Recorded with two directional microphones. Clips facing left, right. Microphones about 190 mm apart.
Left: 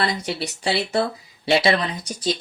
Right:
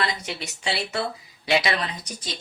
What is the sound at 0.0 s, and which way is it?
Speech, 35° left (ahead or behind).